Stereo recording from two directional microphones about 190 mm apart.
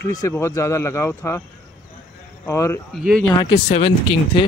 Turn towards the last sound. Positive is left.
turn(degrees=30)  # may be behind; listen again after turning